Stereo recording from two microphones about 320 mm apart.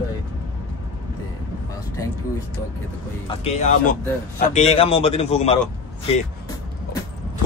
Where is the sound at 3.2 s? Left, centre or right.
Centre.